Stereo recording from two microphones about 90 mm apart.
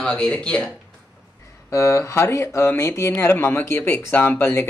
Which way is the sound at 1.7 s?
30° left (ahead or behind).